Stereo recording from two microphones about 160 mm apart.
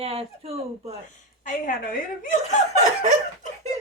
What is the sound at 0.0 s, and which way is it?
Speech, 40° right (ahead or behind).